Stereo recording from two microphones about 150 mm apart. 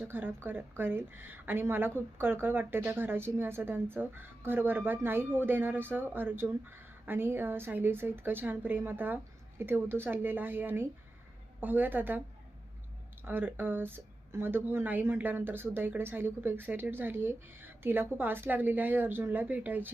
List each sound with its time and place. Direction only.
0.0 s speech: 15° right (ahead or behind)
13.2 s speech: 15° right (ahead or behind)